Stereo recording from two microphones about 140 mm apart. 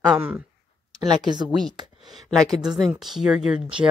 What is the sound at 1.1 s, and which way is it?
Speech, 30° right (ahead or behind).